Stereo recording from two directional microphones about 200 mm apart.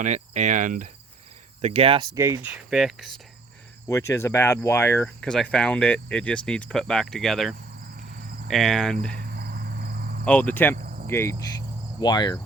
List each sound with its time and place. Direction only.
0.0 s cricket: 35° right (ahead or behind)
1.6 s cricket: 30° right (ahead or behind)
2.1 s speech: 15° right (ahead or behind)
3.8 s speech: 15° left (ahead or behind)
7.8 s cricket: 45° right (ahead or behind)
8.4 s speech: centre (ahead or behind)
9.1 s cricket: 50° right (ahead or behind)
10.2 s cricket: 5° left (ahead or behind)
10.8 s cricket: 45° right (ahead or behind)
11.1 s cricket: 10° left (ahead or behind)
11.9 s speech: 20° left (ahead or behind)